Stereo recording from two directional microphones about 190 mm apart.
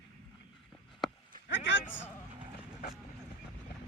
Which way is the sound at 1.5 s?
75° left (ahead or behind).